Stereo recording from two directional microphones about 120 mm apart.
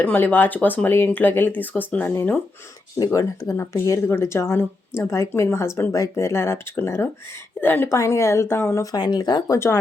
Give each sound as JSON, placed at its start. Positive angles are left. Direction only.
{"t": 0.0, "sound": "speech", "side_deg": 15}
{"t": 3.0, "sound": "speech", "side_deg": 30}